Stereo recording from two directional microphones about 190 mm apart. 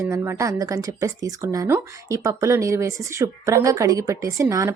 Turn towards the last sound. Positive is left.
turn(degrees=-15)  # may be behind; listen again after turning